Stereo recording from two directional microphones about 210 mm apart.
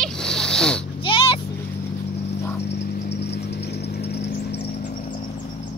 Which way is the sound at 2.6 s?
50° left (ahead or behind).